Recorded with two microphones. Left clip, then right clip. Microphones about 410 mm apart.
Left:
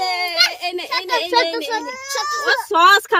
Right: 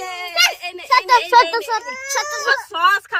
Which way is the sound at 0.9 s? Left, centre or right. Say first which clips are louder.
Right 7 dB; centre.